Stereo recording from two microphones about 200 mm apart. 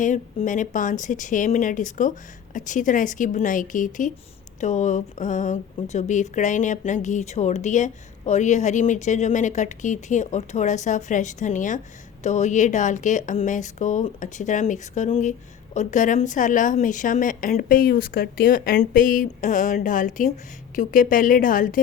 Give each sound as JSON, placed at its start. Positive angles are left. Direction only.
{"t": 0.0, "sound": "a woman's voice", "side_deg": 40}